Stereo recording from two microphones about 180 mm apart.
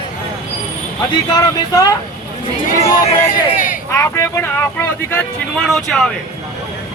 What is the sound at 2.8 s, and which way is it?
Speech, 35° left (ahead or behind).